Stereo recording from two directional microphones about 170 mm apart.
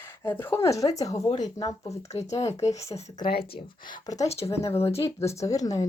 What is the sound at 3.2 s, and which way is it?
Speech, 65° left (ahead or behind).